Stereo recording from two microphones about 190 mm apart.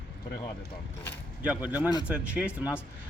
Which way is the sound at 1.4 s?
10° right (ahead or behind).